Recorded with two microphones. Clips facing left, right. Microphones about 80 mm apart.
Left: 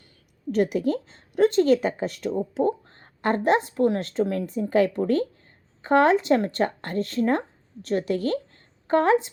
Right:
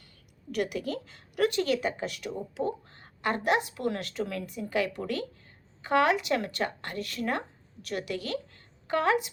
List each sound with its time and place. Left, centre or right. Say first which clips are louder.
0.5 s a woman's voice: left 8 dB; left